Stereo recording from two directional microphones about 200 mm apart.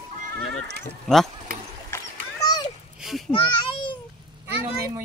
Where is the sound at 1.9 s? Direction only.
20° left (ahead or behind).